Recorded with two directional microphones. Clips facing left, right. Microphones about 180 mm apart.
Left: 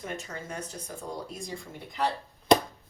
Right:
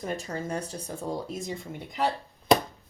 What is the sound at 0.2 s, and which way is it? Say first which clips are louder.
Speech: right 6 dB; 35° right (ahead or behind).